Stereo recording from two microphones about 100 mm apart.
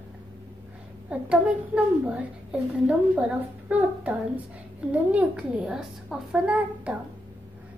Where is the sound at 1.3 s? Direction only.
10° right (ahead or behind).